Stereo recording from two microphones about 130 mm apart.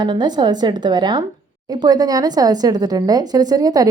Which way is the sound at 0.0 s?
35° right (ahead or behind).